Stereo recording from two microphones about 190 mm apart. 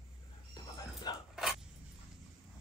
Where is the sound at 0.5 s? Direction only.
20° left (ahead or behind).